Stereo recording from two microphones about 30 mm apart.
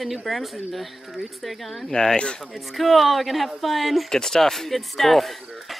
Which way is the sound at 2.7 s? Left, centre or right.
Centre.